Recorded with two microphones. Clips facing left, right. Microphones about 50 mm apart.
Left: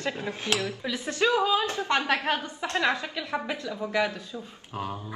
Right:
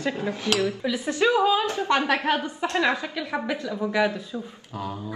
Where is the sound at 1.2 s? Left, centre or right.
Right.